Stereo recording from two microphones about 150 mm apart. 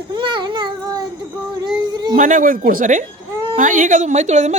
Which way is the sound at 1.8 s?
30° right (ahead or behind).